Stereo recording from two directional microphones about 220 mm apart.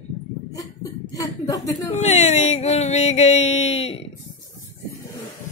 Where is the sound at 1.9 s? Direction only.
30° left (ahead or behind).